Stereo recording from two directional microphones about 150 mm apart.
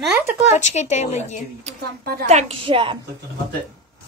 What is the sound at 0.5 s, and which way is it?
Speech, 50° left (ahead or behind).